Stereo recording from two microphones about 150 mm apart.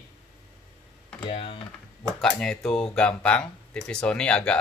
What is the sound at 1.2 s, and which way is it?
Speech, 40° left (ahead or behind).